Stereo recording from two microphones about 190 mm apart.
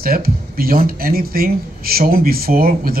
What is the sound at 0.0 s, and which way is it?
Speech, 50° right (ahead or behind).